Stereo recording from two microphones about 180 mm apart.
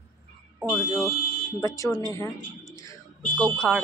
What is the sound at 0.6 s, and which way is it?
Speech, centre (ahead or behind).